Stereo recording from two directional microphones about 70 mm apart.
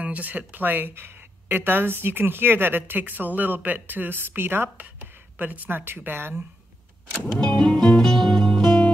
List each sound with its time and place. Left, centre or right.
0.0 s speech: right
7.3 s music: centre